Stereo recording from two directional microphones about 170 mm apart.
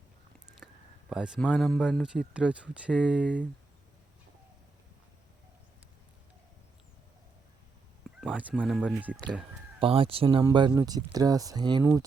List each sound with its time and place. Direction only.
0.6 s a sound: 10° left (ahead or behind)
1.1 s speech: 5° right (ahead or behind)
8.2 s fowl: 5° right (ahead or behind)
8.5 s speech: centre (ahead or behind)
9.8 s speech: 35° right (ahead or behind); by 12.0 s 15° right (ahead or behind)